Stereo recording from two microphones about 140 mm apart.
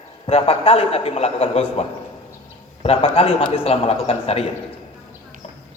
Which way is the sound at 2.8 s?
45° left (ahead or behind).